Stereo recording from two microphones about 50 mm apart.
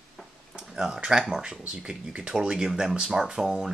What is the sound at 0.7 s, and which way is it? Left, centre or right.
Speech, centre.